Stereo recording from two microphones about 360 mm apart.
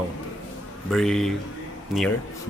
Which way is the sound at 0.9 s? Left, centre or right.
Centre.